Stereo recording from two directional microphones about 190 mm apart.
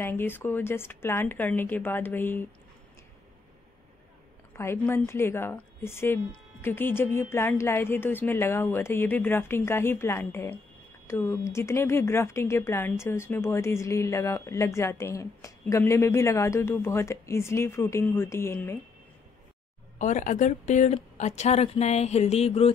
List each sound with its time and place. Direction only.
0.0 s a woman's voice: 10° left (ahead or behind)
4.6 s a woman's voice: 10° left (ahead or behind)
20.0 s a woman's voice: 40° left (ahead or behind)